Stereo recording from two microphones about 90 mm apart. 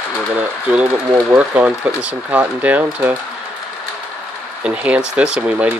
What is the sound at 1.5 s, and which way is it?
Speech, 15° right (ahead or behind).